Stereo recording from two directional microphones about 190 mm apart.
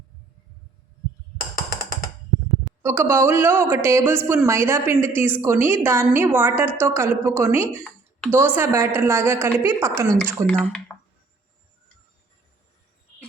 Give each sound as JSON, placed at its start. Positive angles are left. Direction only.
{"t": 1.4, "sound": "music", "side_deg": 50}
{"t": 2.8, "sound": "a woman's voice", "side_deg": -10}
{"t": 10.5, "sound": "speech", "side_deg": 5}